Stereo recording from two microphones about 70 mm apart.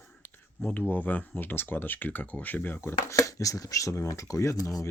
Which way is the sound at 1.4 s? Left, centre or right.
Left.